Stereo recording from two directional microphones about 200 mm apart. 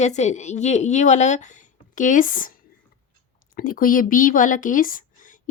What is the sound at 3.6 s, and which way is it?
Speech, 45° left (ahead or behind).